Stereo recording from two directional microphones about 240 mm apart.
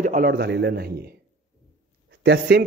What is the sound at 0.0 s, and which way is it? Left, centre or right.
A man's voice, right.